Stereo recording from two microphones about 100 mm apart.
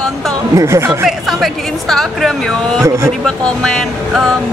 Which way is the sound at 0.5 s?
30° right (ahead or behind).